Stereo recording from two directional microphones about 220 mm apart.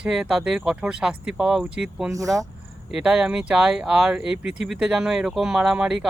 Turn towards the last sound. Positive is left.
turn(degrees=-5)  # may be behind; listen again after turning